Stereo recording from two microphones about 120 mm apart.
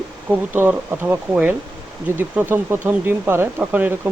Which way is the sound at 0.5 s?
15° right (ahead or behind).